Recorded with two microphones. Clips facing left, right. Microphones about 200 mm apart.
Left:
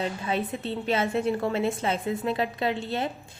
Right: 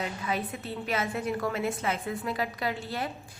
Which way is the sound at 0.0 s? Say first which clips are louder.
Left 4 dB; 25° left (ahead or behind).